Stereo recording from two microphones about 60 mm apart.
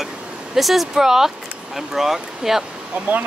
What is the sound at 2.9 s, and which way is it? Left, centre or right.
Speech, right.